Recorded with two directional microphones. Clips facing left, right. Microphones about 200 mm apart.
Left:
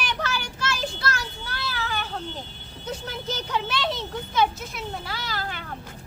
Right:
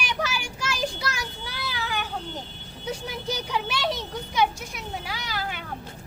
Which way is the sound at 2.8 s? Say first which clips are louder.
Right 1 dB; 10° right (ahead or behind).